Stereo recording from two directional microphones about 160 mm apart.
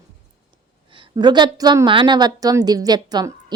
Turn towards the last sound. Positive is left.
turn(degrees=-25)  # may be behind; listen again after turning